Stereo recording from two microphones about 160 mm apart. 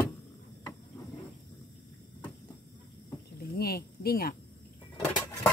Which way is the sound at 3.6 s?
75° left (ahead or behind).